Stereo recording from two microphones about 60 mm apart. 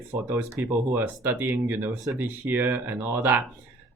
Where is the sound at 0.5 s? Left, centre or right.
Right.